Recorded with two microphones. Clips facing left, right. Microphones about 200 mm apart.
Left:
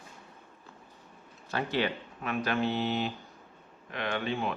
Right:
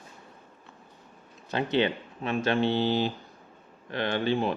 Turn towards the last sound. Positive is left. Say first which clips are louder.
# right 5 dB
turn(degrees=-35)  # may be behind; listen again after turning